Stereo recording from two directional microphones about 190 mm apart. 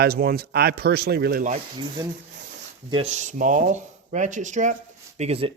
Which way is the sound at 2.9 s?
30° right (ahead or behind).